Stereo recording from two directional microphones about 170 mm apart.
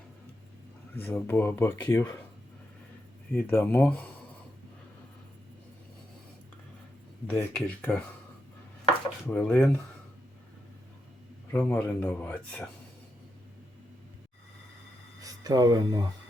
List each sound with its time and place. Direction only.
1.0 s speech: 10° left (ahead or behind)
3.3 s speech: 10° left (ahead or behind)
7.3 s speech: 10° left (ahead or behind)
9.2 s speech: 10° left (ahead or behind)
11.5 s speech: 10° left (ahead or behind)
15.2 s speech: 20° right (ahead or behind)